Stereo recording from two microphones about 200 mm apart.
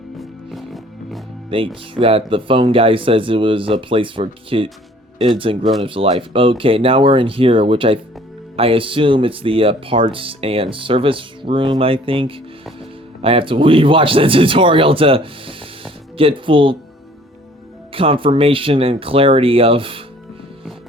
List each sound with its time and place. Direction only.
0.2 s music: centre (ahead or behind)
1.5 s speech: 25° right (ahead or behind)
17.9 s speech: 25° right (ahead or behind)